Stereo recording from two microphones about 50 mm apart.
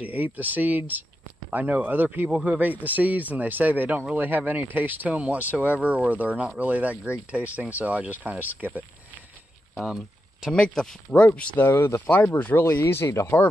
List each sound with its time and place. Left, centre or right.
0.0 s speech: right
9.8 s a sound: centre
10.5 s speech: centre
11.5 s speech: left
12.1 s speech: left
12.6 s speech: left